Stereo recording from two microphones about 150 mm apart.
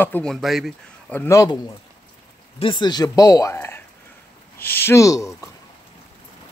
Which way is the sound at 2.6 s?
30° left (ahead or behind).